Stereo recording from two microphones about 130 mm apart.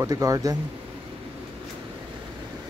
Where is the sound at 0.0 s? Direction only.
25° right (ahead or behind).